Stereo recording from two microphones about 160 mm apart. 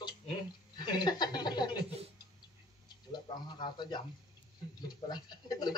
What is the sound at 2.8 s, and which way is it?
A man's voice, 25° left (ahead or behind).